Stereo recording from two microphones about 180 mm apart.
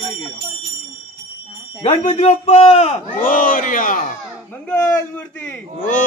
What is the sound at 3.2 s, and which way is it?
Speech, 50° left (ahead or behind).